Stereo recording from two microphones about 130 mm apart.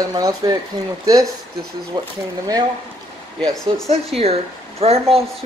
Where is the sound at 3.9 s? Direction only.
50° right (ahead or behind).